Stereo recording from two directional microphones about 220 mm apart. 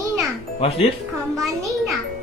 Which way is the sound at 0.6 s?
25° left (ahead or behind).